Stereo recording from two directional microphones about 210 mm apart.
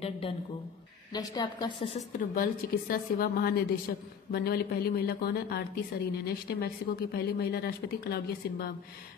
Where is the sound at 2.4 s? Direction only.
45° left (ahead or behind).